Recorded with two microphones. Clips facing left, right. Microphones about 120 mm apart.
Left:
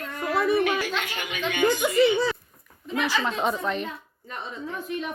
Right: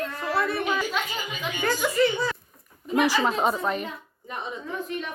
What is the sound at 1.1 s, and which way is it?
Speech, 75° left (ahead or behind).